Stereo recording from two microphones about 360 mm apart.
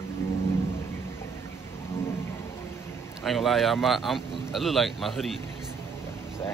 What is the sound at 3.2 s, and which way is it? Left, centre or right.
Speech, centre.